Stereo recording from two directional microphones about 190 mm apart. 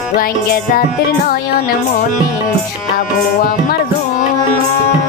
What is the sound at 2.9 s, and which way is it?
Music, 50° left (ahead or behind).